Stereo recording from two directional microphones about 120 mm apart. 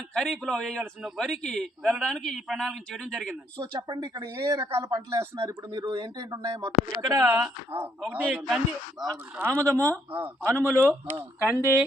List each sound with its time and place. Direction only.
0.1 s a man's voice: 5° left (ahead or behind)
3.6 s speech: 35° right (ahead or behind)
8.0 s a man's voice: 10° right (ahead or behind)
9.4 s speech: 25° right (ahead or behind)
11.5 s speech: 20° left (ahead or behind)